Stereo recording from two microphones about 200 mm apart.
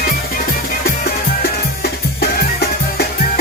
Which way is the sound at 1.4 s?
50° left (ahead or behind).